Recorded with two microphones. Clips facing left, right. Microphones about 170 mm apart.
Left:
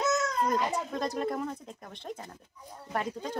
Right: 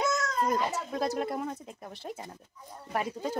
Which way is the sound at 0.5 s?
5° right (ahead or behind).